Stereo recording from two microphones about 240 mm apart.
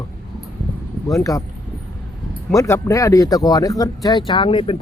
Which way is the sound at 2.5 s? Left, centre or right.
Centre.